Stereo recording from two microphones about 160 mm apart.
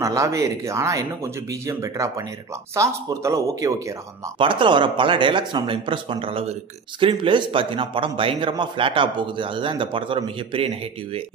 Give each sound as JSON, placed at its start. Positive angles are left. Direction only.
{"t": 0.0, "sound": "speech", "side_deg": -20}
{"t": 4.4, "sound": "a man's voice", "side_deg": -30}